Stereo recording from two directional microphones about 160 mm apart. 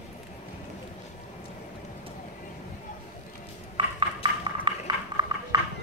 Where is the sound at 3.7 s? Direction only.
30° right (ahead or behind).